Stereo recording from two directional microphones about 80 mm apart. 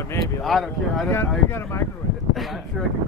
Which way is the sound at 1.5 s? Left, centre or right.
Left.